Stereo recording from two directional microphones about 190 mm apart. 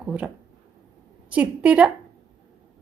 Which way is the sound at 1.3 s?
5° right (ahead or behind).